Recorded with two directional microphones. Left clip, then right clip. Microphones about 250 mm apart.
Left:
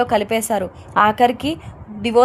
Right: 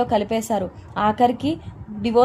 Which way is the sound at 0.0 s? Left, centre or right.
Left.